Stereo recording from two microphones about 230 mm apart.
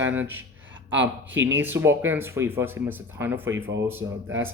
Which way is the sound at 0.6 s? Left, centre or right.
Right.